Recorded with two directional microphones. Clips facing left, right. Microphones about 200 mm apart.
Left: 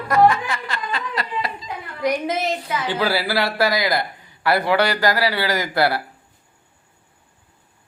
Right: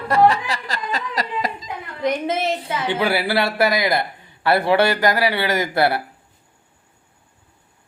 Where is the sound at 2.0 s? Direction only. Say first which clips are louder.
Even; 25° right (ahead or behind).